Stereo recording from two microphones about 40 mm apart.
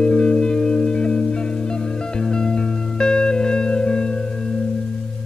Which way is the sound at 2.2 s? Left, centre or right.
Centre.